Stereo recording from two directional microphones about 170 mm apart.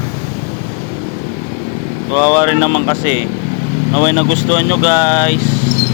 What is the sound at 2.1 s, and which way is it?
Speech, 15° left (ahead or behind).